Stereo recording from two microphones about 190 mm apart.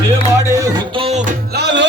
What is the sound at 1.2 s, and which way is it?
Music, 60° right (ahead or behind).